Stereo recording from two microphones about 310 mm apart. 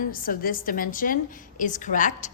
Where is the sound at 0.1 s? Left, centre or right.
Left.